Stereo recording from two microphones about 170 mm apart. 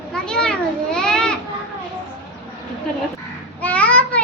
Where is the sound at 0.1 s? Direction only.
5° left (ahead or behind).